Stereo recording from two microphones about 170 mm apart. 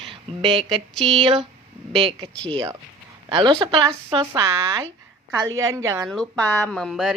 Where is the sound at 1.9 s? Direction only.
35° right (ahead or behind).